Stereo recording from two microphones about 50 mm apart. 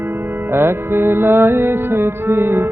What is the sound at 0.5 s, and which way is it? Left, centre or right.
Music, right.